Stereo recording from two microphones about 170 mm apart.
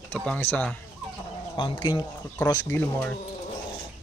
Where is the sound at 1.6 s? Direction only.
30° left (ahead or behind).